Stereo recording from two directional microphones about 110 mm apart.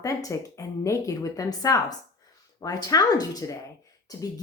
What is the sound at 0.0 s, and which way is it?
A woman's voice, 30° left (ahead or behind).